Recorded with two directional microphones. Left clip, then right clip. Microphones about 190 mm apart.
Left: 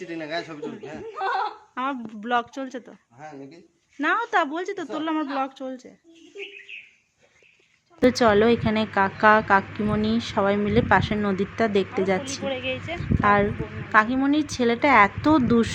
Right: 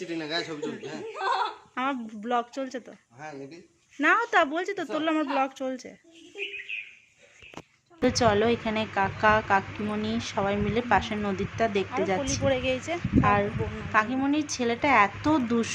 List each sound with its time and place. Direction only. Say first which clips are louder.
0.0 s a woman's voice: left 1 dB; 15° left (ahead or behind)
1.2 s speech: left 1 dB; 30° right (ahead or behind)
1.7 s a woman's voice: left 1 dB; 5° left (ahead or behind)
4.0 s speech: even; centre (ahead or behind)
6.7 s a sound: right 5 dB; 15° left (ahead or behind)
8.0 s a woman's voice: left 5 dB; 10° left (ahead or behind)
12.5 s speech: right 3 dB; 25° right (ahead or behind)
13.2 s a woman's voice: left 6 dB; 10° left (ahead or behind)